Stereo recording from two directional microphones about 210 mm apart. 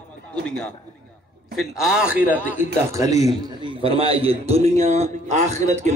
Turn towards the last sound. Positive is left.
turn(degrees=-35)  # may be behind; listen again after turning